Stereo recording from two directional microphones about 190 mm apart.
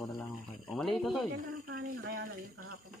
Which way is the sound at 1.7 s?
55° right (ahead or behind).